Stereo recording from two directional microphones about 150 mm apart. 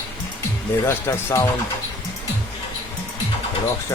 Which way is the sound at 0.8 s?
15° left (ahead or behind).